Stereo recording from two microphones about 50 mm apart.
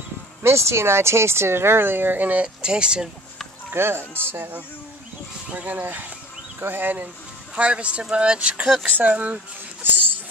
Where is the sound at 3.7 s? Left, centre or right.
Right.